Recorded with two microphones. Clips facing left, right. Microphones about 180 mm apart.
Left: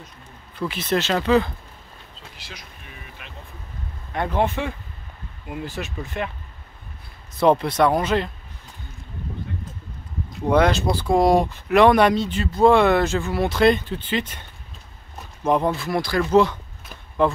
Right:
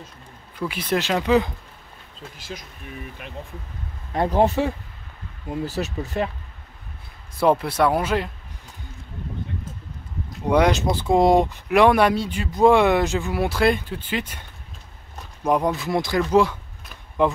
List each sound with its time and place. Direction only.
0.6 s speech: 10° right (ahead or behind)
2.3 s speech: 45° right (ahead or behind)
7.3 s speech: 5° right (ahead or behind)
10.5 s speech: 15° right (ahead or behind)
11.7 s speech: 10° right (ahead or behind)
15.4 s speech: 10° right (ahead or behind)
16.2 s speech: 10° right (ahead or behind)